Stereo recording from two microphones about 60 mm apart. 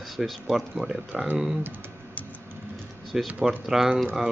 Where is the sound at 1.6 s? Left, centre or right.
Right.